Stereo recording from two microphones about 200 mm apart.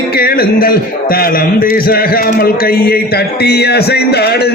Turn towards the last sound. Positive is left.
turn(degrees=55)  # may be behind; listen again after turning